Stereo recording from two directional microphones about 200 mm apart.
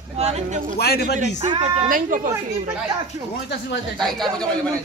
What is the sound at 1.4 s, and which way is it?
Speech, 35° right (ahead or behind).